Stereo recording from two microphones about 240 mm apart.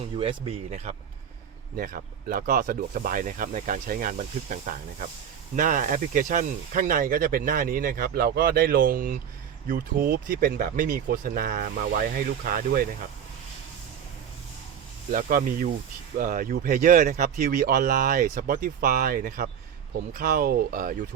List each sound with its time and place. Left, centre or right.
0.2 s speech: right
15.1 s speech: right